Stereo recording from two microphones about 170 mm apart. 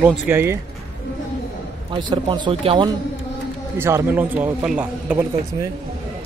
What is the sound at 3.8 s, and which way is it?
Speech, 15° right (ahead or behind).